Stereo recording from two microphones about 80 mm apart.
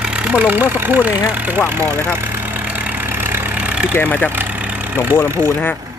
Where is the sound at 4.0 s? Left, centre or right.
Left.